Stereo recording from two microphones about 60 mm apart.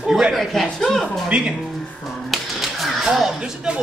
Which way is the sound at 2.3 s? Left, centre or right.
Centre.